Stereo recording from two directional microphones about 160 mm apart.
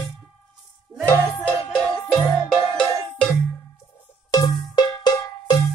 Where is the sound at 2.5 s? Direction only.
5° left (ahead or behind).